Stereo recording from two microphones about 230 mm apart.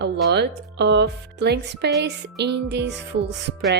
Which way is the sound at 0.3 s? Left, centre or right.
Right.